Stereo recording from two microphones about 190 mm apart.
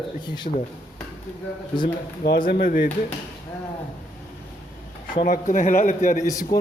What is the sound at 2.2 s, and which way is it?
Speech, 55° left (ahead or behind).